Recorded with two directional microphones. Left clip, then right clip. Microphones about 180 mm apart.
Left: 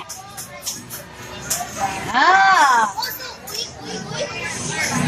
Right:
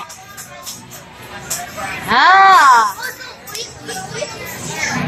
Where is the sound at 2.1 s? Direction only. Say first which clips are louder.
Right 5 dB; 35° right (ahead or behind).